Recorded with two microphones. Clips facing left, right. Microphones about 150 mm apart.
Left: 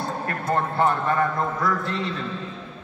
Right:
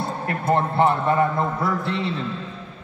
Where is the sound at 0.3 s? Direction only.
25° right (ahead or behind).